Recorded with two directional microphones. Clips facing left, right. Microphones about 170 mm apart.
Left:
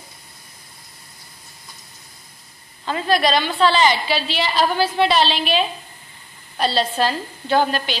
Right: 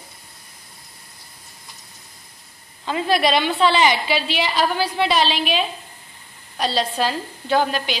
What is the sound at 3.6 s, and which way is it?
A woman's voice, 15° right (ahead or behind).